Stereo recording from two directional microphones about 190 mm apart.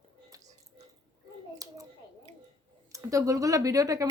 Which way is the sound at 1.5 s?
20° right (ahead or behind).